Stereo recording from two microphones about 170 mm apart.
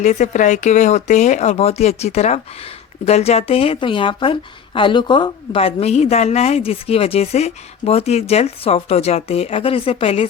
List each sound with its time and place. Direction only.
0.0 s a woman's voice: 45° left (ahead or behind)